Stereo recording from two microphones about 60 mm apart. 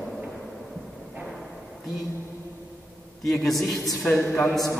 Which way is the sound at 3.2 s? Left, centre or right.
Centre.